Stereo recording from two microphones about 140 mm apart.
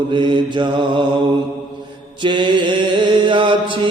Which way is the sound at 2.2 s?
35° right (ahead or behind).